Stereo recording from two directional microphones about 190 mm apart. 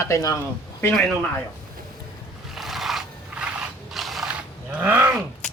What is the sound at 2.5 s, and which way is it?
Scrape, centre (ahead or behind).